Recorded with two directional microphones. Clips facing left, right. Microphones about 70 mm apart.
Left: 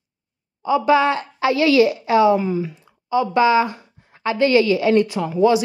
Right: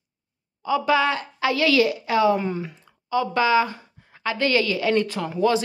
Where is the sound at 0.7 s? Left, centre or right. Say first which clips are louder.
Left 4 dB; left.